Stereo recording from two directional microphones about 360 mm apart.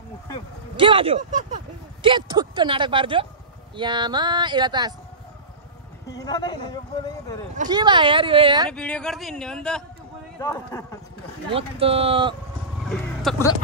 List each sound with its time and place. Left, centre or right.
0.7 s speech: centre
6.0 s speech: centre
7.5 s speech: centre
8.6 s a man's voice: centre
11.5 s speech: centre
12.8 s vehicle: centre